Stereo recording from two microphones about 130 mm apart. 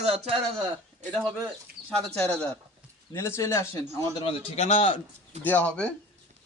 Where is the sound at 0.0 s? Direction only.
55° right (ahead or behind).